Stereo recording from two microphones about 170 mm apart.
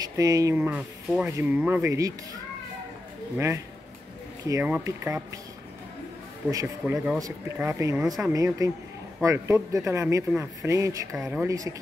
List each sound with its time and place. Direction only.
0.2 s speech: 20° right (ahead or behind)
0.6 s speech: 10° right (ahead or behind)
3.3 s speech: 15° right (ahead or behind)
6.5 s speech: 20° right (ahead or behind)
11.1 s speech: centre (ahead or behind)
11.4 s speech: 20° right (ahead or behind)